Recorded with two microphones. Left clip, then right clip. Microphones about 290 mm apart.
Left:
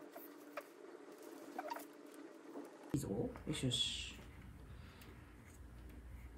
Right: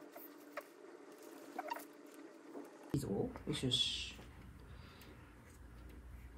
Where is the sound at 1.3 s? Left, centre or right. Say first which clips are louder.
Right 2 dB; centre.